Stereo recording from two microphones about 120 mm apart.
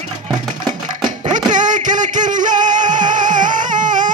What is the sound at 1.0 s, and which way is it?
Music, 90° right.